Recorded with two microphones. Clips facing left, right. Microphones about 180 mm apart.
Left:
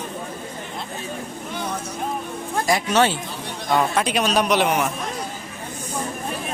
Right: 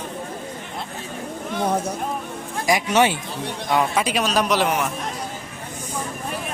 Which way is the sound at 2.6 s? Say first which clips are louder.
Right 1 dB; 15° right (ahead or behind).